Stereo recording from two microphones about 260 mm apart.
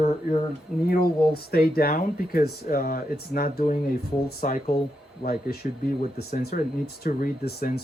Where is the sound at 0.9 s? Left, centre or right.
Left.